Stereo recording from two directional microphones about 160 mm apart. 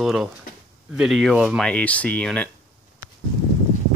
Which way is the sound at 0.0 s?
5° right (ahead or behind).